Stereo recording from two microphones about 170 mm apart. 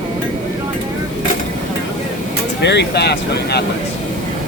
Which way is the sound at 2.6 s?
85° left.